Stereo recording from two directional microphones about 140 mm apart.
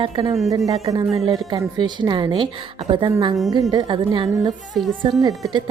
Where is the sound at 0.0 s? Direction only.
40° right (ahead or behind).